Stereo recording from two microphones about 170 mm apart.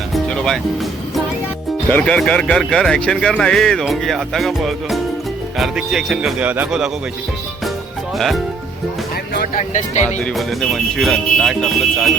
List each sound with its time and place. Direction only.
0.1 s music: 5° left (ahead or behind)
1.9 s speech: 10° left (ahead or behind)
9.6 s speech: 45° left (ahead or behind)
10.2 s speech: centre (ahead or behind)